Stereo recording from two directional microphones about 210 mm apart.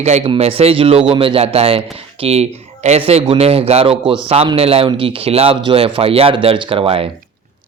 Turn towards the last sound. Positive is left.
turn(degrees=-25)  # may be behind; listen again after turning